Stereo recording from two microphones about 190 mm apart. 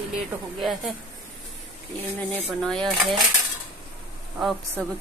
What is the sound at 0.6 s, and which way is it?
Speech, centre (ahead or behind).